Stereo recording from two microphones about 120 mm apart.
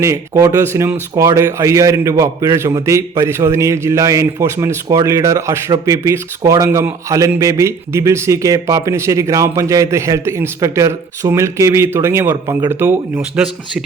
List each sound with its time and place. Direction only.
0.0 s a man's voice: 25° right (ahead or behind)